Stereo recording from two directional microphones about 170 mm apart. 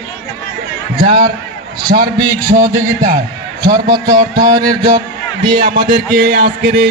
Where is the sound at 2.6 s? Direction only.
50° right (ahead or behind).